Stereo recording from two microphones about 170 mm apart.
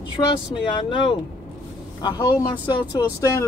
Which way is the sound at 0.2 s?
25° left (ahead or behind).